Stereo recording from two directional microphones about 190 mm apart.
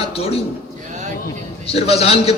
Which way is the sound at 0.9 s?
40° right (ahead or behind).